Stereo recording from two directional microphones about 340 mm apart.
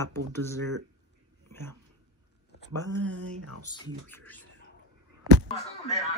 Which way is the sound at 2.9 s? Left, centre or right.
Right.